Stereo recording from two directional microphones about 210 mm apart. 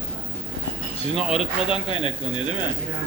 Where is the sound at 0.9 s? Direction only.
30° left (ahead or behind).